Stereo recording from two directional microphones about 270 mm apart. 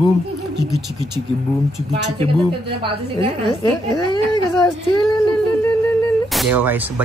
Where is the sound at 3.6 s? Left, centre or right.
Centre.